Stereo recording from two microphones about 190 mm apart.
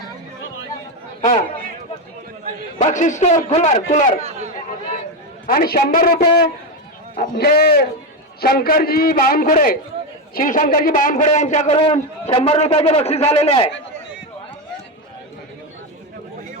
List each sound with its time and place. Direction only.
1.2 s a man's voice: 45° left (ahead or behind)
2.8 s a man's voice: 40° left (ahead or behind)
4.2 s chatter: 35° right (ahead or behind)
5.5 s a man's voice: 50° left (ahead or behind); by 13.7 s 30° left (ahead or behind)